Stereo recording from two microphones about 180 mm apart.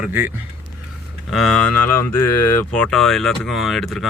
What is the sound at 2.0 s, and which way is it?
Speech, 15° left (ahead or behind).